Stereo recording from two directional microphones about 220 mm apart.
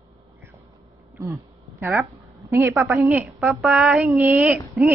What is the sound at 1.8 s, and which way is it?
A woman's voice, 10° right (ahead or behind).